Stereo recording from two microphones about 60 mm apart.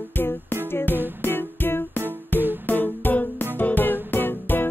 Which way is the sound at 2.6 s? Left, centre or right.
Left.